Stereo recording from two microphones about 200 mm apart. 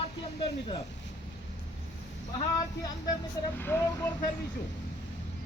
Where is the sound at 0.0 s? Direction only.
20° left (ahead or behind).